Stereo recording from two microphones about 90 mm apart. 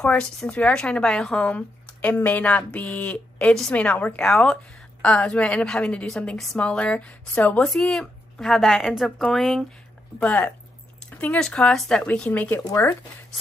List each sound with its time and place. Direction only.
0.0 s a woman's voice: 15° left (ahead or behind)
10.1 s a woman's voice: 15° left (ahead or behind)
12.5 s speech: 30° left (ahead or behind)